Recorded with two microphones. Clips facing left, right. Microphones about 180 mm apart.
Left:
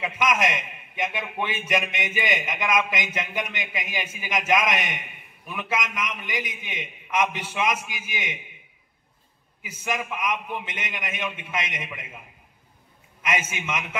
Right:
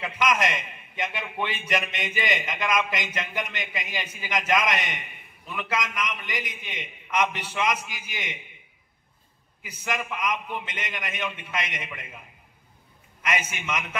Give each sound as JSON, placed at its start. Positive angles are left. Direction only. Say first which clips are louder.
{"t": 0.0, "sound": "a man's voice", "louder": "left 1 dB", "side_deg": 15}
{"t": 9.8, "sound": "a man's voice", "louder": "left 1 dB", "side_deg": 15}
{"t": 13.2, "sound": "a man's voice", "louder": "left 1 dB", "side_deg": 20}